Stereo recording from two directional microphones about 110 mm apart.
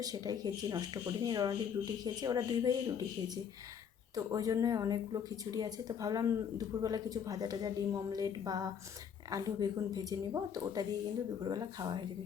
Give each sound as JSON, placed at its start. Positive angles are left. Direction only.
{"t": 0.0, "sound": "speech", "side_deg": -35}